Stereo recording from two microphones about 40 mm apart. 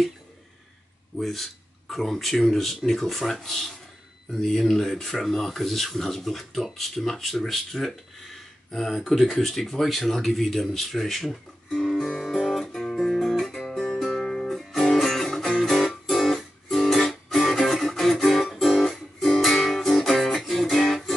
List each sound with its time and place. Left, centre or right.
1.1 s speech: centre
12.2 s guitar: centre
12.5 s music: centre
12.9 s guitar: centre
13.7 s music: centre
14.6 s music: centre